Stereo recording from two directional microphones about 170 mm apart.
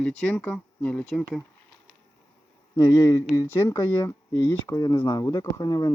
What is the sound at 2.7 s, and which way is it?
Speech, 20° left (ahead or behind).